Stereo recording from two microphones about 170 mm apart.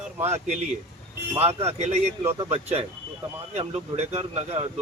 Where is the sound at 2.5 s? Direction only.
35° right (ahead or behind).